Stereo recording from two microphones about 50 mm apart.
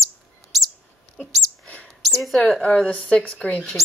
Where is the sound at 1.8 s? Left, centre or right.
Centre.